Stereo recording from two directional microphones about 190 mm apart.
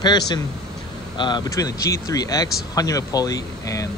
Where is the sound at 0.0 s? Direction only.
20° left (ahead or behind).